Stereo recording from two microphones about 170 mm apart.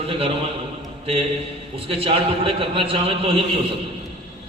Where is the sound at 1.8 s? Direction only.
35° right (ahead or behind).